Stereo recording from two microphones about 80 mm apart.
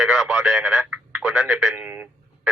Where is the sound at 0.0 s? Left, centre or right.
Centre.